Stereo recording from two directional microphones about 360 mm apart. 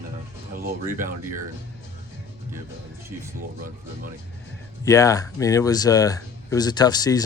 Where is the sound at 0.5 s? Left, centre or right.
Right.